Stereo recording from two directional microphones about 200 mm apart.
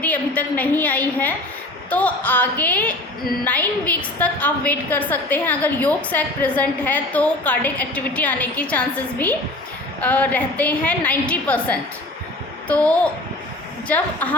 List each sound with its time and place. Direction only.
0.0 s a woman's voice: 10° left (ahead or behind)